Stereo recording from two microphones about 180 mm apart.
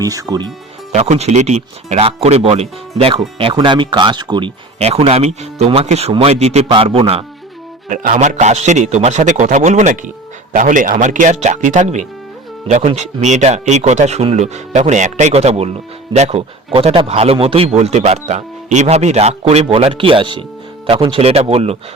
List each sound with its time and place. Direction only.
0.0 s speech: 20° right (ahead or behind)
0.9 s a man's voice: 40° right (ahead or behind)
7.9 s a man's voice: 50° right (ahead or behind)